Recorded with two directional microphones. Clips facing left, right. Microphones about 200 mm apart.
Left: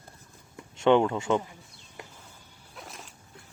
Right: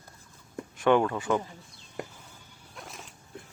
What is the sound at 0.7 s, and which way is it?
Speech, 20° left (ahead or behind).